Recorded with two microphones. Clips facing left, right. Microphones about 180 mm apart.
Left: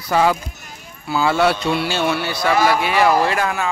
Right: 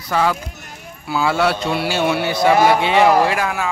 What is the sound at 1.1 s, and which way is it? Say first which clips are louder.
A man's voice: left 1 dB; 5° right (ahead or behind).